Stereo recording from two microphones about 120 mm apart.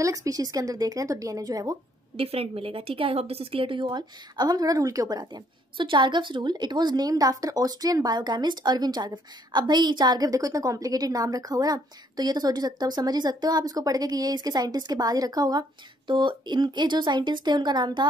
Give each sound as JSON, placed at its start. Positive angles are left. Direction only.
{"t": 0.0, "sound": "speech", "side_deg": -30}
{"t": 2.1, "sound": "a woman's voice", "side_deg": -55}